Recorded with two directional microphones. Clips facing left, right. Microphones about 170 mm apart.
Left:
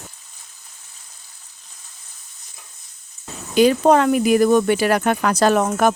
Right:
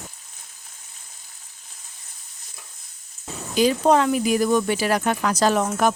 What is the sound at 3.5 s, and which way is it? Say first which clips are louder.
Speech: left 4 dB; 60° left (ahead or behind).